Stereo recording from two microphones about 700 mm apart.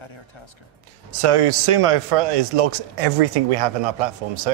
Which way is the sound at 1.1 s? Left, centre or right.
Right.